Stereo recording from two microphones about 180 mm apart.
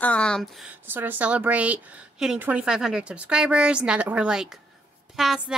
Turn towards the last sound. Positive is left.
turn(degrees=-5)  # may be behind; listen again after turning